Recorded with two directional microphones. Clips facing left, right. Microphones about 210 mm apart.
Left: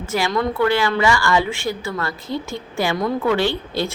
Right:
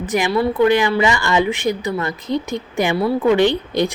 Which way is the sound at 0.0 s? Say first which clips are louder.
Right 3 dB; 15° right (ahead or behind).